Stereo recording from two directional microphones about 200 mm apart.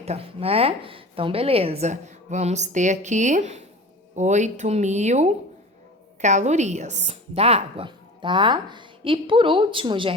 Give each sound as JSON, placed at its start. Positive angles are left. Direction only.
{"t": 0.0, "sound": "a woman's voice", "side_deg": -30}